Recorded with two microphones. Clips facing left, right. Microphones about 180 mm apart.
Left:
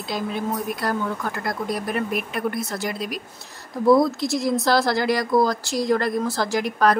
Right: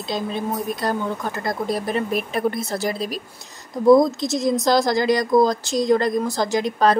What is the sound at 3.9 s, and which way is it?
A woman's voice, 20° right (ahead or behind).